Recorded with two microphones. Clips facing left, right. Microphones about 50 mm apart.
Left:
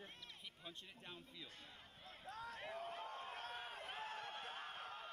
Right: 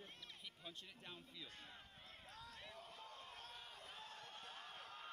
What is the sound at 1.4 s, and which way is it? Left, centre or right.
Speech, right.